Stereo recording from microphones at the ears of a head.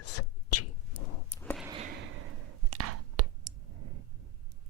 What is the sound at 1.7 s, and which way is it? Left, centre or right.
Sigh, right.